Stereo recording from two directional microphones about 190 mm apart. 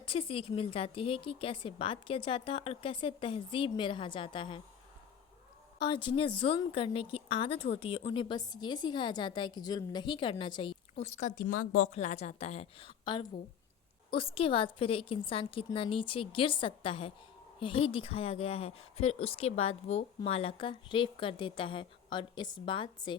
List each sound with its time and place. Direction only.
0.0 s a woman's voice: 30° left (ahead or behind)
5.8 s a woman's voice: 25° left (ahead or behind); by 11.9 s 50° left (ahead or behind)
11.9 s a woman's voice: 35° left (ahead or behind)
14.1 s a woman's voice: 30° left (ahead or behind)